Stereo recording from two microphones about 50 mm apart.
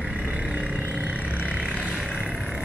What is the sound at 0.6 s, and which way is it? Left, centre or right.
Vehicle, right.